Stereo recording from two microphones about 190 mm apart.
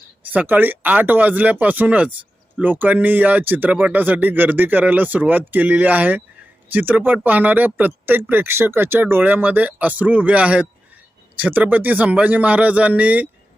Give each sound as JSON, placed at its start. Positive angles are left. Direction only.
{"t": 0.3, "sound": "speech", "side_deg": -10}